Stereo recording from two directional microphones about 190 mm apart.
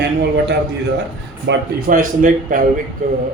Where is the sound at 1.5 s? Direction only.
65° right (ahead or behind).